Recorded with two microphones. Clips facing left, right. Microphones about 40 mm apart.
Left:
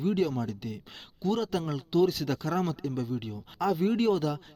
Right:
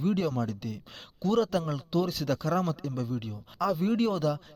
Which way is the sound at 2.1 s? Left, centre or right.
Left.